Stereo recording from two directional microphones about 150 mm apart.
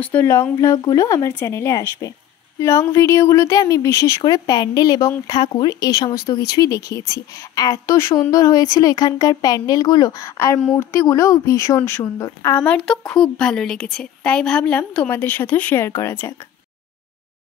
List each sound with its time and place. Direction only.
0.0 s speech: 15° left (ahead or behind)
12.6 s a woman's voice: 5° left (ahead or behind)